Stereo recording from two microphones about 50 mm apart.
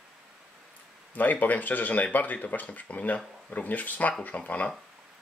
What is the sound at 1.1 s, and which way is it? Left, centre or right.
Speech, left.